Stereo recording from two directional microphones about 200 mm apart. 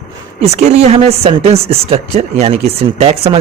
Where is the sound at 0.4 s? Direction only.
35° right (ahead or behind).